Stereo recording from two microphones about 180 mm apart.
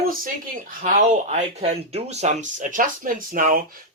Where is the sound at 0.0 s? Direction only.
50° right (ahead or behind).